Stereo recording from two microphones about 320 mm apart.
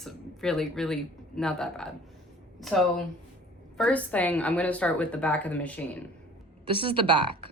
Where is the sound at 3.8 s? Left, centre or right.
Centre.